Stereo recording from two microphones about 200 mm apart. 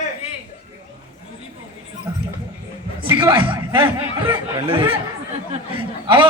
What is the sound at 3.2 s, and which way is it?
A man's voice, 25° right (ahead or behind).